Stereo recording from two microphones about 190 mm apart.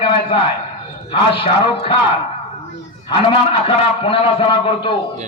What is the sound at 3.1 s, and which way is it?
A man's voice, 30° left (ahead or behind).